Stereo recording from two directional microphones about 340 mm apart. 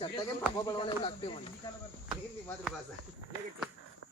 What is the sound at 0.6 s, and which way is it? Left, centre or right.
Speech, centre.